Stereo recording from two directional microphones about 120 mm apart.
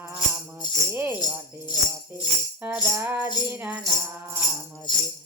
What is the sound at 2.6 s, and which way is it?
Music, 20° right (ahead or behind).